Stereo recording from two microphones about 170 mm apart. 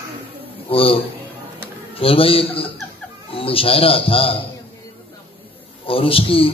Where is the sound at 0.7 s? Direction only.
35° left (ahead or behind).